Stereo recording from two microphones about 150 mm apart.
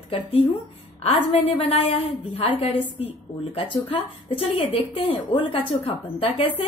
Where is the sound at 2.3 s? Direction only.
40° left (ahead or behind).